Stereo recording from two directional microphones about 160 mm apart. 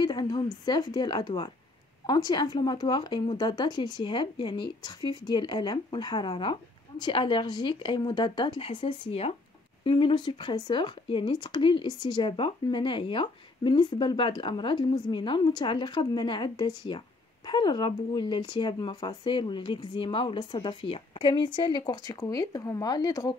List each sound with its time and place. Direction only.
0.0 s a woman's voice: 25° left (ahead or behind)